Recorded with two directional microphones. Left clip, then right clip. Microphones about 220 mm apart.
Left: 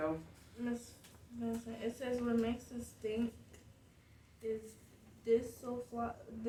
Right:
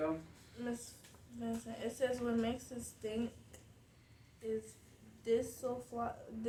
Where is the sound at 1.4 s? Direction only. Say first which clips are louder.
Left 1 dB; 30° right (ahead or behind).